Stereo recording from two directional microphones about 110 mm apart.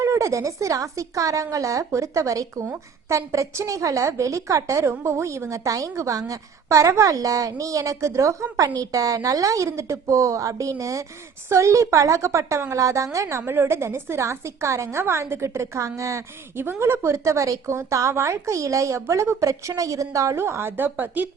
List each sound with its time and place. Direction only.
0.0 s speech: 30° right (ahead or behind)